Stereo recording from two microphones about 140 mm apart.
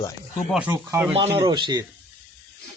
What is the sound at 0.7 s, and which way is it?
Speech, 20° right (ahead or behind).